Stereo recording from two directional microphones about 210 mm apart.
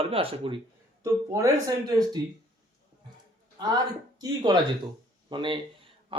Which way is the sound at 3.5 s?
20° right (ahead or behind).